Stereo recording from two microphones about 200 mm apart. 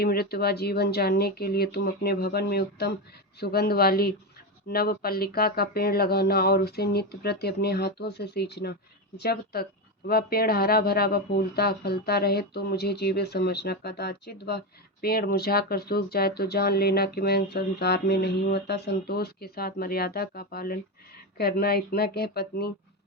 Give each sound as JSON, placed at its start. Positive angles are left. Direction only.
{"t": 0.0, "sound": "speech", "side_deg": 50}